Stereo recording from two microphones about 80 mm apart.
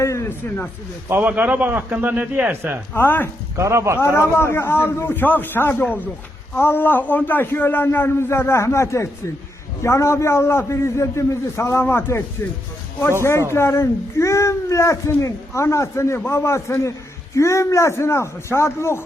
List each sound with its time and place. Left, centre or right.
0.0 s a sound: left
0.3 s a man's voice: left
1.2 s a man's voice: centre
2.9 s a man's voice: left
3.5 s a man's voice: right
4.0 s a man's voice: left
13.5 s a child's voice: left
16.1 s a man's voice: left
16.4 s a child's voice: left